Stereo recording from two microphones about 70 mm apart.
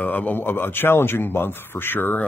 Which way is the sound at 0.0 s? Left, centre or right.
Left.